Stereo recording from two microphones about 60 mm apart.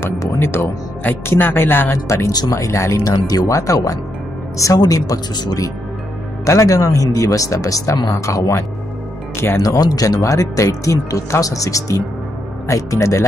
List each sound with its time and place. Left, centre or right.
0.4 s speech: left
2.0 s speech: left
3.0 s speech: left
6.4 s speech: left
9.6 s speech: left